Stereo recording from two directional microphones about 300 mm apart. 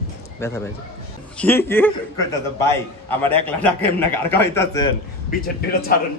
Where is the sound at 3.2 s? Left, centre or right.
Centre.